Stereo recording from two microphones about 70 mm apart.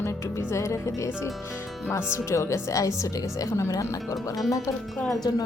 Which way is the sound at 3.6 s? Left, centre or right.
Left.